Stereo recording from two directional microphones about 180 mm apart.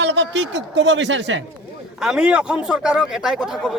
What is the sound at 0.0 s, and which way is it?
Speech, 75° right (ahead or behind).